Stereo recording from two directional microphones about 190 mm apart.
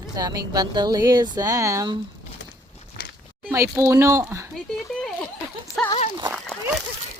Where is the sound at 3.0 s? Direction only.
55° left (ahead or behind).